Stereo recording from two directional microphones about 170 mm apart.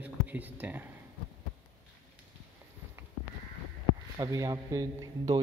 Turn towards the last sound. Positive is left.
turn(degrees=-20)  # may be behind; listen again after turning